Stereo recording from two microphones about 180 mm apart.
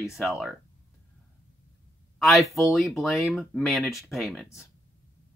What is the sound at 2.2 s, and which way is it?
Speech, centre (ahead or behind).